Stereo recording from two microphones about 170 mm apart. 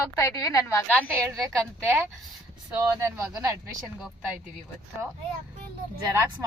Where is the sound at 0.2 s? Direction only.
20° left (ahead or behind).